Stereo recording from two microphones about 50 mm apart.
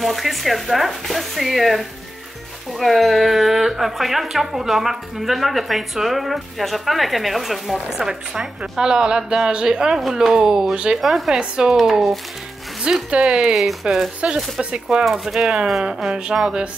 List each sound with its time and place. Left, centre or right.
0.0 s a woman's voice: centre
11.0 s a woman's voice: centre
11.3 s a woman's voice: centre
11.8 s a woman's voice: centre
13.1 s a woman's voice: centre
13.6 s a woman's voice: centre
14.6 s a woman's voice: right